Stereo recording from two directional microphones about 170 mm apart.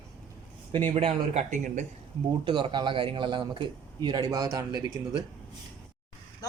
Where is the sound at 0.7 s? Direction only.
30° right (ahead or behind); by 1.8 s 45° right (ahead or behind).